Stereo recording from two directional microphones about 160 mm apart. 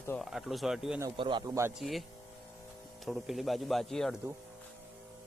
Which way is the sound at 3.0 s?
Centre (ahead or behind).